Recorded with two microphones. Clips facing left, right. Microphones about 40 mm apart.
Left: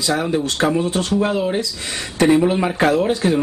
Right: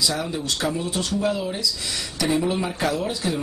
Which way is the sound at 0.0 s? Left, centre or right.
Left.